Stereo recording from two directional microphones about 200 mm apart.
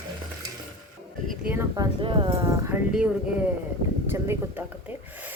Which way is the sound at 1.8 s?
25° right (ahead or behind).